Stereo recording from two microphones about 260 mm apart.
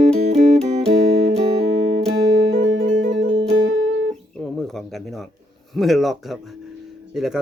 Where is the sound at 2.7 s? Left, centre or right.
Right.